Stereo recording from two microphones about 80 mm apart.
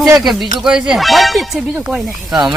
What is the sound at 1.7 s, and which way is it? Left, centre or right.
Speech, centre.